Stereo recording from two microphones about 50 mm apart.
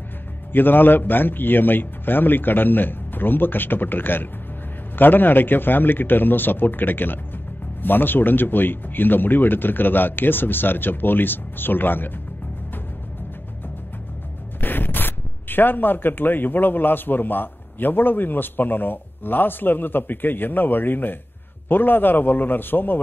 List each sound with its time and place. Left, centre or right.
0.5 s speech: left
14.6 s speech: left